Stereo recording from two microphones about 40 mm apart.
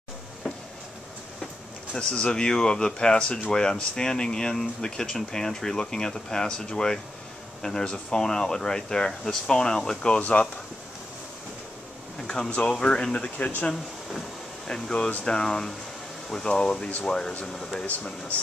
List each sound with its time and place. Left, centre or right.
2.0 s speech: left
12.6 s speech: left
14.7 s speech: left
17.8 s speech: left